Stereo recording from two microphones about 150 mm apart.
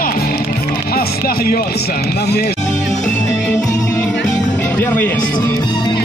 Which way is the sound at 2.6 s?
55° left (ahead or behind).